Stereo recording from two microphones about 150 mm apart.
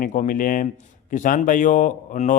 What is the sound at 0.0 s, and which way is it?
A man's voice, 60° left (ahead or behind).